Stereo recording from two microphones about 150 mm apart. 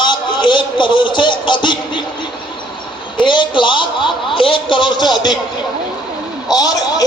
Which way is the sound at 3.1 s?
30° left (ahead or behind).